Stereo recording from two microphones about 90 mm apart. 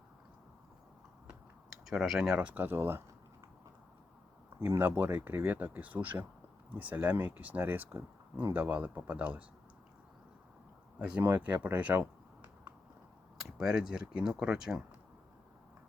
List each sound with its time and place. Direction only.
1.9 s speech: 5° right (ahead or behind); by 3.0 s 25° right (ahead or behind)
4.6 s speech: 20° right (ahead or behind)
11.0 s speech: 15° right (ahead or behind)
13.4 s speech: 5° right (ahead or behind)